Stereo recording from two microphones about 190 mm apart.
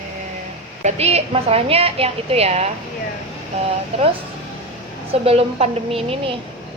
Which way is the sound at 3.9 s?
35° right (ahead or behind).